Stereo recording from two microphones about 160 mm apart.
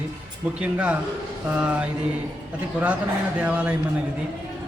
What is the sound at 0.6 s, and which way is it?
A man's voice, 10° right (ahead or behind).